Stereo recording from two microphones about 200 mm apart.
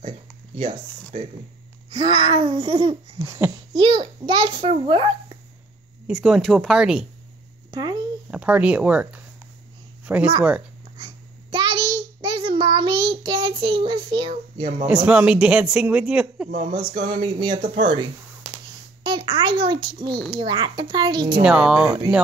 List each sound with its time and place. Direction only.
1.9 s a child's voice: 25° right (ahead or behind)
3.7 s a child's voice: 25° right (ahead or behind)
6.0 s speech: 5° right (ahead or behind)
7.7 s a child's voice: 20° right (ahead or behind)
8.3 s speech: 5° right (ahead or behind)
11.0 s child singing: 20° right (ahead or behind)
14.9 s speech: 5° right (ahead or behind)
16.5 s a child's voice: 25° right (ahead or behind)
18.4 s a sound: centre (ahead or behind)
19.0 s a child's voice: 25° right (ahead or behind)
21.4 s speech: 5° right (ahead or behind)